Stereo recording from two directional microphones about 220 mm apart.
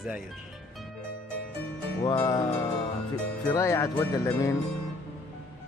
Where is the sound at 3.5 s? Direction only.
15° left (ahead or behind).